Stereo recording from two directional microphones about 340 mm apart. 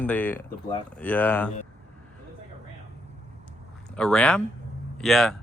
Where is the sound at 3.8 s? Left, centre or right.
Centre.